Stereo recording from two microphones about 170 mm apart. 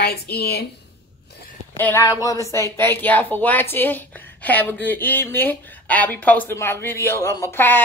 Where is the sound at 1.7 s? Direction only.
15° left (ahead or behind).